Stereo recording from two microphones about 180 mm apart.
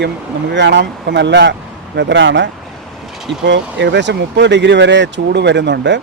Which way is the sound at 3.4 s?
80° right.